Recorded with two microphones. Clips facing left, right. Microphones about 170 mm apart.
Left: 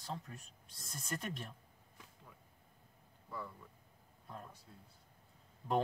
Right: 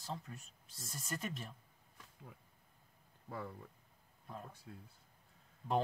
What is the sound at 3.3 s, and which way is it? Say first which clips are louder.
Speech: right 2 dB; 55° right (ahead or behind).